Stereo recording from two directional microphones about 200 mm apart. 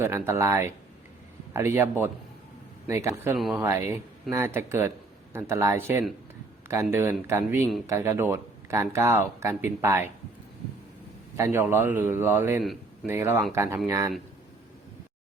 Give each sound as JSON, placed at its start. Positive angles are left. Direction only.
{"t": 0.0, "sound": "speech", "side_deg": -15}
{"t": 3.3, "sound": "speech", "side_deg": 0}
{"t": 3.6, "sound": "speech", "side_deg": -15}
{"t": 11.3, "sound": "speech", "side_deg": -15}